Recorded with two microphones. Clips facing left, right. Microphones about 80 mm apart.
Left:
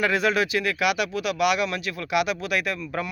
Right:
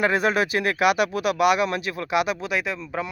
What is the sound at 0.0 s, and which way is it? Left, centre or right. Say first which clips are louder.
Speech: right 1 dB; right.